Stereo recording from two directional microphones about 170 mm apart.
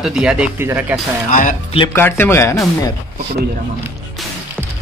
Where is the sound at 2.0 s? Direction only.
10° left (ahead or behind).